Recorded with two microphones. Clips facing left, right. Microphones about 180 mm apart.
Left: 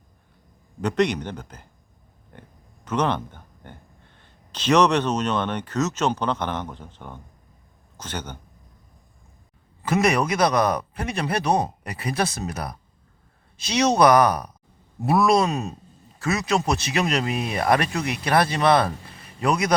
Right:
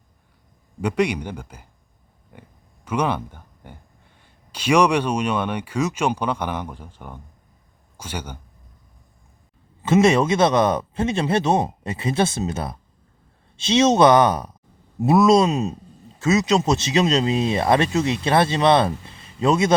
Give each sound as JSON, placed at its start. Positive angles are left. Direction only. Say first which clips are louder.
{"t": 0.8, "sound": "speech", "louder": "right 1 dB", "side_deg": -10}
{"t": 2.3, "sound": "a sound", "louder": "right 1 dB", "side_deg": -10}
{"t": 2.8, "sound": "speech", "louder": "right 1 dB", "side_deg": -10}
{"t": 9.8, "sound": "speech", "louder": "right 5 dB", "side_deg": -25}